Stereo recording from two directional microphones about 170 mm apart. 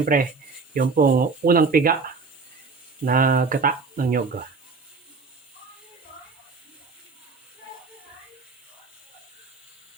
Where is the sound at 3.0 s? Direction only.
55° right (ahead or behind).